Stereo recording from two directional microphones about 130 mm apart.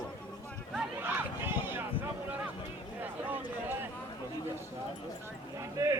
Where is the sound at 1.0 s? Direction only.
15° right (ahead or behind).